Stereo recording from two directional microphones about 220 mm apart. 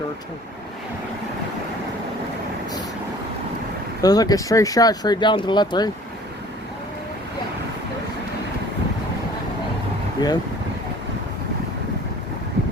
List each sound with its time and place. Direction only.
4.0 s speech: 15° left (ahead or behind)
10.2 s speech: 20° left (ahead or behind)